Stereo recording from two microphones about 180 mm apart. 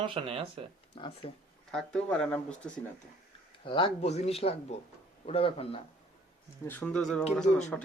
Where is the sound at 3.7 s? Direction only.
30° left (ahead or behind).